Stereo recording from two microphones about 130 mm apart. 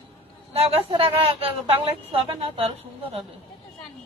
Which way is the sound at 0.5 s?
50° right (ahead or behind).